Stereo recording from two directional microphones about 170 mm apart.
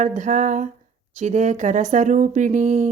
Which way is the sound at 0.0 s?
50° right (ahead or behind).